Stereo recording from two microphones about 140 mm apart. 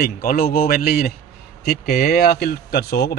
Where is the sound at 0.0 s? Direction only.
90° left.